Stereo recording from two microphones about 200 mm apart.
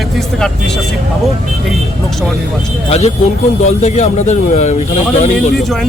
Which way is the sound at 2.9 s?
30° left (ahead or behind).